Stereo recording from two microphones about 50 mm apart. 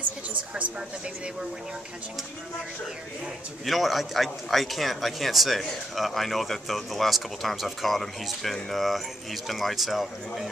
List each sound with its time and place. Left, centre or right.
3.6 s a man's voice: centre